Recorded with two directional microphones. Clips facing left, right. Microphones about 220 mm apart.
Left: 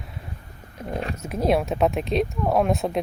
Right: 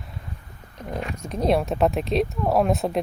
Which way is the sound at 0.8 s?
10° left (ahead or behind).